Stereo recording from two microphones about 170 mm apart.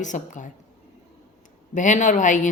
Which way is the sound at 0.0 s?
50° left (ahead or behind).